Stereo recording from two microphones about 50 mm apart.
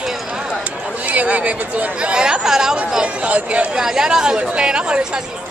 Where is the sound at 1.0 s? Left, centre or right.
Right; by 3.0 s centre.